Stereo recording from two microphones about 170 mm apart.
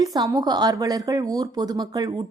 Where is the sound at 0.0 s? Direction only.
20° right (ahead or behind).